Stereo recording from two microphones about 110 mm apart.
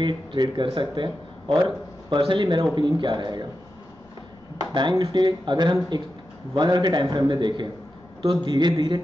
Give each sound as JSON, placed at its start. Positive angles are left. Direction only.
{"t": 0.0, "sound": "a man's voice", "side_deg": -45}
{"t": 4.7, "sound": "a man's voice", "side_deg": -45}